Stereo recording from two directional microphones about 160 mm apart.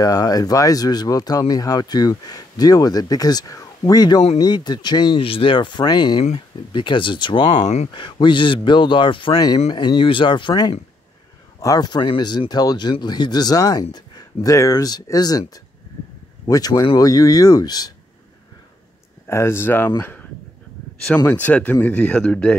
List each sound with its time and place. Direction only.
0.0 s speech: 25° left (ahead or behind)
7.6 s speech: 45° left (ahead or behind)
7.9 s speech: 30° left (ahead or behind)
19.2 s speech: 15° left (ahead or behind)
21.3 s speech: 10° left (ahead or behind)